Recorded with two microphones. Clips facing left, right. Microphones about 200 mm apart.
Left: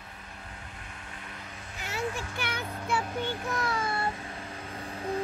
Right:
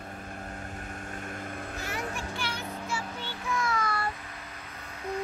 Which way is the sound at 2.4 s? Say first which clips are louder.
Left 1 dB; 60° left (ahead or behind).